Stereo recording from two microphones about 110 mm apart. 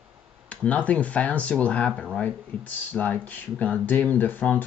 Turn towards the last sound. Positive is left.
turn(degrees=15)  # may be behind; listen again after turning